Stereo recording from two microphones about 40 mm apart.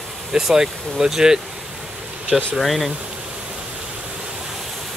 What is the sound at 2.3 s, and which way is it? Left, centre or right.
Speech, centre.